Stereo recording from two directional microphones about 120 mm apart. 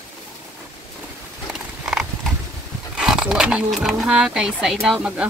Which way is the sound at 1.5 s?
5° right (ahead or behind).